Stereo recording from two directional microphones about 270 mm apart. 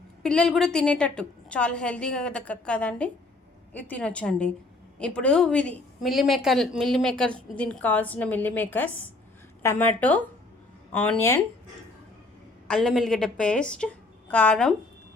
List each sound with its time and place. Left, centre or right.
0.2 s a woman's voice: centre
12.6 s a woman's voice: centre